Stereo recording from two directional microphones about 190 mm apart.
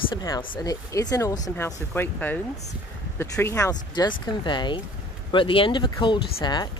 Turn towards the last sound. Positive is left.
turn(degrees=25)  # may be behind; listen again after turning